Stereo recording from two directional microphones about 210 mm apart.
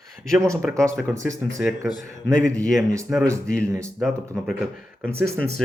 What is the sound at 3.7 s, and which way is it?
Speech, 15° right (ahead or behind).